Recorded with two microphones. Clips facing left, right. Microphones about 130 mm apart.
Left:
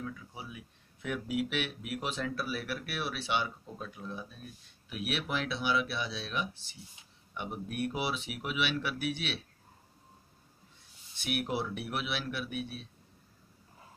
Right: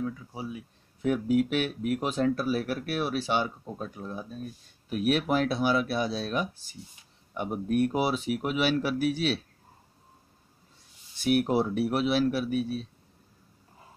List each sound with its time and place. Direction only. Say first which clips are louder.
0.0 s speech: right 8 dB; 35° right (ahead or behind)
11.1 s speech: right 9 dB; 40° right (ahead or behind)